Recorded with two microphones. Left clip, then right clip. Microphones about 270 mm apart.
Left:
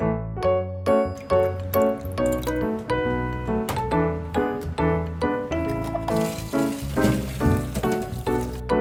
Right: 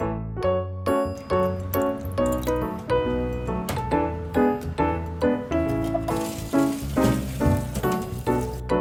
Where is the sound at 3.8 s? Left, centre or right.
Centre.